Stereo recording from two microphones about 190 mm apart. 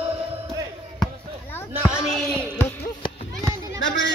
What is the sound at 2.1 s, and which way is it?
Speech, 5° left (ahead or behind).